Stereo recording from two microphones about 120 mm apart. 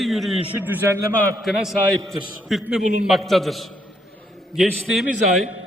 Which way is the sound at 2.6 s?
5° right (ahead or behind).